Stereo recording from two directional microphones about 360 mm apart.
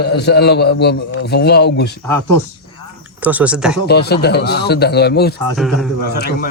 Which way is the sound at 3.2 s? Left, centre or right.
Centre.